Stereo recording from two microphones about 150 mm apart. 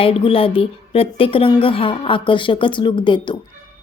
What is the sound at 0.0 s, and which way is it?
A woman's voice, 40° left (ahead or behind).